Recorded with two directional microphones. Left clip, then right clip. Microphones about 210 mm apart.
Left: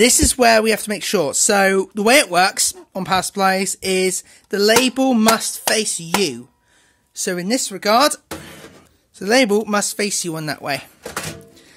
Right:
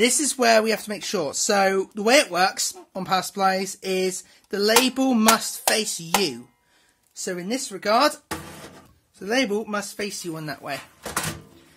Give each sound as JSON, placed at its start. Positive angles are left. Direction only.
{"t": 0.0, "sound": "speech", "side_deg": 40}
{"t": 7.2, "sound": "speech", "side_deg": 50}
{"t": 9.2, "sound": "speech", "side_deg": 50}